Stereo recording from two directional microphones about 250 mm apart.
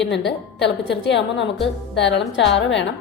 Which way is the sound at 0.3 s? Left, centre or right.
Left.